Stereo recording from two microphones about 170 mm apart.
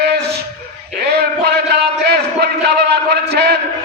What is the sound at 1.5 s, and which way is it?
A man's voice, 75° right (ahead or behind).